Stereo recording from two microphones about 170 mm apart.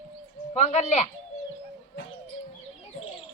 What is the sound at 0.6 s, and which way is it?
Speech, 40° left (ahead or behind).